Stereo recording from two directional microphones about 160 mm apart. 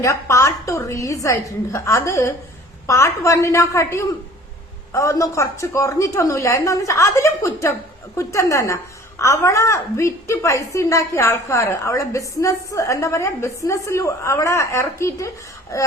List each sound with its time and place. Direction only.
0.0 s a woman's voice: 20° left (ahead or behind)